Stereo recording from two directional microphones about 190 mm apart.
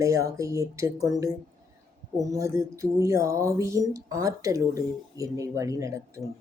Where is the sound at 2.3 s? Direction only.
15° right (ahead or behind).